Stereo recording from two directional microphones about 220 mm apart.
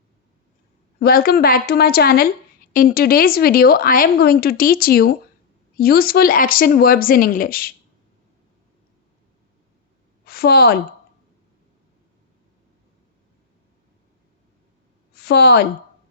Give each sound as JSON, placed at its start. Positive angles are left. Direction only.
{"t": 0.9, "sound": "speech", "side_deg": 40}
{"t": 10.2, "sound": "a woman's voice", "side_deg": 45}
{"t": 15.1, "sound": "a woman's voice", "side_deg": 45}